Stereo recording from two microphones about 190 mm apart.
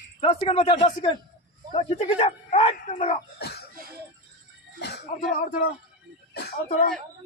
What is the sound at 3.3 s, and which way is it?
Speech, 60° left (ahead or behind).